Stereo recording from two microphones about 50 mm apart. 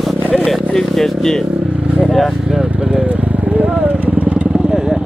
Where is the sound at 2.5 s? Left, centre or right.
Centre.